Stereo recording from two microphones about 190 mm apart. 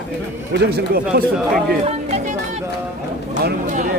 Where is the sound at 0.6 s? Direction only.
60° right (ahead or behind).